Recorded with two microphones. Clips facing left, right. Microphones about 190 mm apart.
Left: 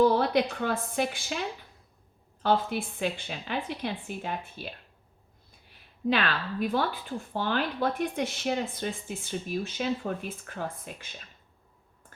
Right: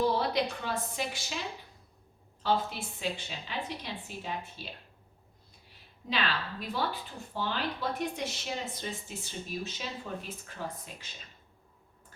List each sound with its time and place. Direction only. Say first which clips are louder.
0.2 s speech: left 5 dB; 55° left (ahead or behind)
6.1 s speech: left 6 dB; 55° left (ahead or behind)